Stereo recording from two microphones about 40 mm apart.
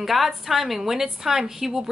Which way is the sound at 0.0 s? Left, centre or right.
Centre.